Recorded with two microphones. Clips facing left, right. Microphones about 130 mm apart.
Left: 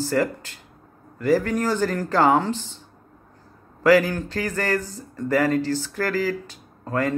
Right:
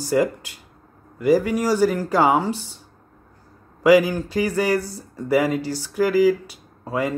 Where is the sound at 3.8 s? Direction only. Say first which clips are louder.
Right 2 dB; 10° right (ahead or behind).